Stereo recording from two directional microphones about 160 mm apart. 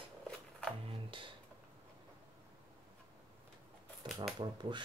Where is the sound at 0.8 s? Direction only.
35° right (ahead or behind).